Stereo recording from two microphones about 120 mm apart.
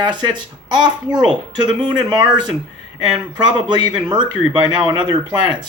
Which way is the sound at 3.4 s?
35° right (ahead or behind).